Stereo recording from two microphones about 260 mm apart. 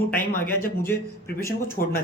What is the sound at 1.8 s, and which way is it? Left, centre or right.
Speech, left.